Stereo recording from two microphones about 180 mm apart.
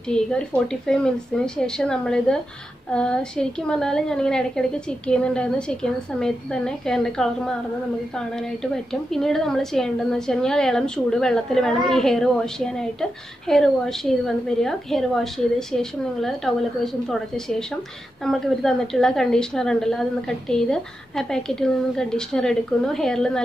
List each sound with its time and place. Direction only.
0.1 s a woman's voice: 5° left (ahead or behind)